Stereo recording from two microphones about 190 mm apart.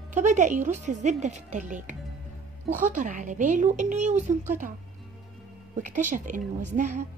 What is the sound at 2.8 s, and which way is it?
Speech, 45° right (ahead or behind).